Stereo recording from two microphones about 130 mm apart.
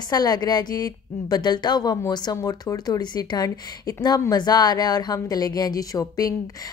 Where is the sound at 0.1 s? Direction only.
30° left (ahead or behind).